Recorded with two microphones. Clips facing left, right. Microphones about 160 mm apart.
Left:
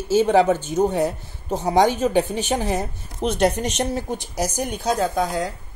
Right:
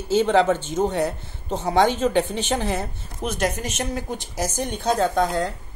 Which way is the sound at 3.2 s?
35° left (ahead or behind).